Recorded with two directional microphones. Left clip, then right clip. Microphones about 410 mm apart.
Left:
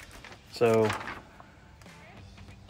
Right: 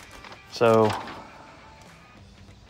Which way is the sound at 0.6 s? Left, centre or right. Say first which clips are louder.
Right 5 dB; centre.